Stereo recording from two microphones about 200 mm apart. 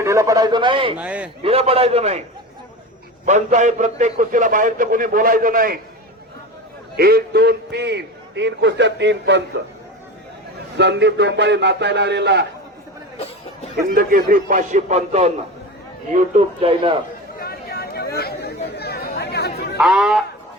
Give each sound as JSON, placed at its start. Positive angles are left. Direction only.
{"t": 0.0, "sound": "a man's voice", "side_deg": -15}
{"t": 0.9, "sound": "a man's voice", "side_deg": -5}
{"t": 1.4, "sound": "a man's voice", "side_deg": -30}
{"t": 3.2, "sound": "a man's voice", "side_deg": -35}
{"t": 6.9, "sound": "a man's voice", "side_deg": -50}
{"t": 10.8, "sound": "a man's voice", "side_deg": -60}
{"t": 13.7, "sound": "a man's voice", "side_deg": -45}
{"t": 17.4, "sound": "chatter", "side_deg": 50}
{"t": 19.7, "sound": "speech", "side_deg": -5}